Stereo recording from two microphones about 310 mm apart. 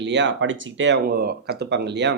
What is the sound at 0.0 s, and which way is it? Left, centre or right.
Speech, right.